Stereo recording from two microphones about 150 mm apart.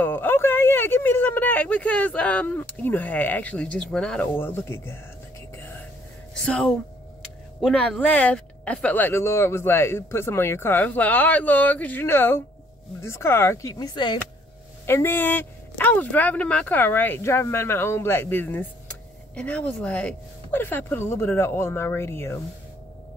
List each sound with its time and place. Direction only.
0.0 s speech: 15° left (ahead or behind)
6.4 s speech: 5° left (ahead or behind)
7.7 s speech: 10° left (ahead or behind); by 14.1 s 25° left (ahead or behind)
14.9 s speech: 15° left (ahead or behind)